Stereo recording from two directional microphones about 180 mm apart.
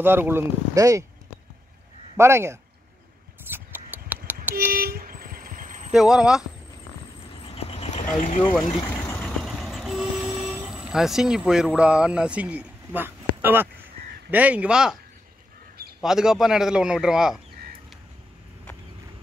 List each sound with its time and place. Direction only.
0.0 s speech: 10° right (ahead or behind)
2.1 s speech: 15° right (ahead or behind)
3.4 s scissors: 10° right (ahead or behind)
4.7 s vehicle: 55° right (ahead or behind)
5.9 s a man's voice: 5° right (ahead or behind)
7.4 s a sound: 35° left (ahead or behind)
9.2 s vehicle: centre (ahead or behind)
14.3 s speech: 10° right (ahead or behind)
16.0 s a man's voice: 5° right (ahead or behind)